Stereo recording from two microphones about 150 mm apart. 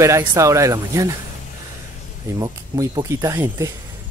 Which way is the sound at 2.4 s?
25° right (ahead or behind).